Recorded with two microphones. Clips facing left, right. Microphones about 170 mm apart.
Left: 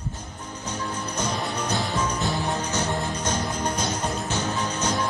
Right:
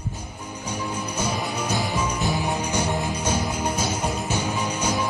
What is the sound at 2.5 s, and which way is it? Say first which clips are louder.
Music: right 2 dB; 10° right (ahead or behind).